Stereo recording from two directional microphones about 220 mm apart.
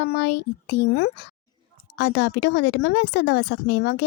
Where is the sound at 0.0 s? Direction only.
50° left (ahead or behind).